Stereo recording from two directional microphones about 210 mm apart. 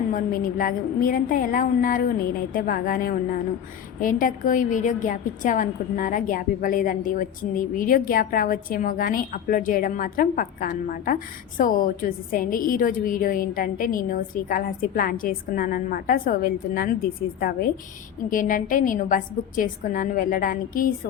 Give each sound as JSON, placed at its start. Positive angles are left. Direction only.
{"t": 0.1, "sound": "a woman's voice", "side_deg": 40}